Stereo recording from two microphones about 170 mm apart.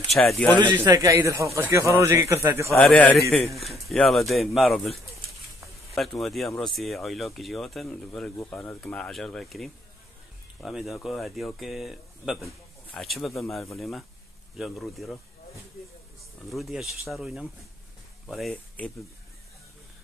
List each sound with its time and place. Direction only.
0.1 s a man's voice: 5° left (ahead or behind)
0.7 s speech: 15° right (ahead or behind)
2.7 s a man's voice: 10° left (ahead or behind)
16.4 s a man's voice: centre (ahead or behind)